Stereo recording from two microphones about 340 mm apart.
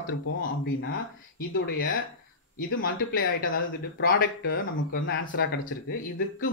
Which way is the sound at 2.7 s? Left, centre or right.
Left.